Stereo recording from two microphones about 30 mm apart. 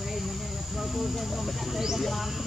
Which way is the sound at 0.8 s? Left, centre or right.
Centre.